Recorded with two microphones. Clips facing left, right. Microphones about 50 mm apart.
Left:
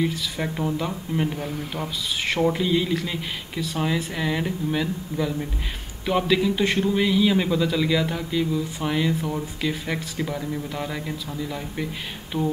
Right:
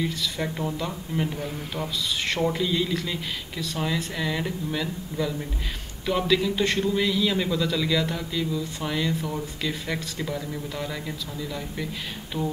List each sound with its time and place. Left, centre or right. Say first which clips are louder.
0.0 s a man's voice: left 2 dB; centre